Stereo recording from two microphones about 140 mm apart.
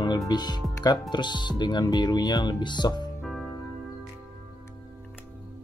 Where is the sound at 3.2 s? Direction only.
Centre (ahead or behind).